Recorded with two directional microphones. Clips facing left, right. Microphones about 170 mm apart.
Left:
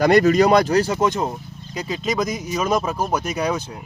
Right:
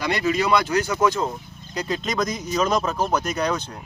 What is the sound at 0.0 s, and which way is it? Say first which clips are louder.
Speech: left 9 dB; 45° left (ahead or behind).